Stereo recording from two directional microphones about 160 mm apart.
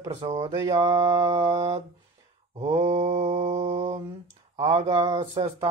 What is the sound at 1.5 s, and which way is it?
Speech, 40° right (ahead or behind).